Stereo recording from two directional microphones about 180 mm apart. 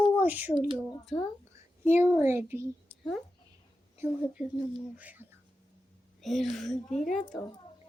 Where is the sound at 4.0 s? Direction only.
10° right (ahead or behind).